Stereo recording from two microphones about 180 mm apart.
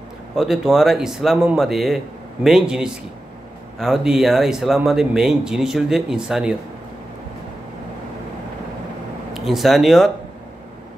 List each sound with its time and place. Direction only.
0.4 s speech: centre (ahead or behind)
9.3 s speech: centre (ahead or behind)